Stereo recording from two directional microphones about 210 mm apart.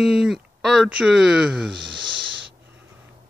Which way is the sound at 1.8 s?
20° right (ahead or behind).